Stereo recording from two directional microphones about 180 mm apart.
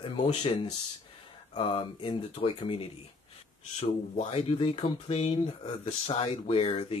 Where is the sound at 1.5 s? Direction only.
30° left (ahead or behind).